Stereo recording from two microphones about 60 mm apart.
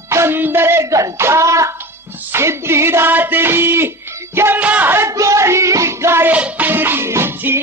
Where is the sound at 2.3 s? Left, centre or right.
Right.